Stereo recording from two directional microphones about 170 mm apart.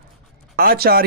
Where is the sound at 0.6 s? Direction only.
60° right (ahead or behind).